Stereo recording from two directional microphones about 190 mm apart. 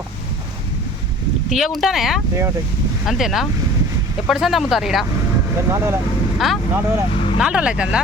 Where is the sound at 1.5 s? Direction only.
Centre (ahead or behind).